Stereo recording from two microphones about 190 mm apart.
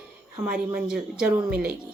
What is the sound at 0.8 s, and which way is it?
Speech, 5° right (ahead or behind).